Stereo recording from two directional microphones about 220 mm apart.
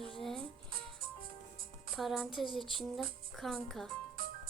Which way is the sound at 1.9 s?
Centre (ahead or behind).